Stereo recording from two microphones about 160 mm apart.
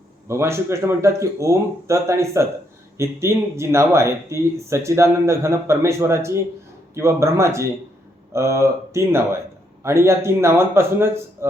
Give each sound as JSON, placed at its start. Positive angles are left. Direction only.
{"t": 0.3, "sound": "speech", "side_deg": -15}